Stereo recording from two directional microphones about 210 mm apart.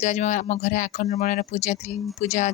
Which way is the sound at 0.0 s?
35° left (ahead or behind).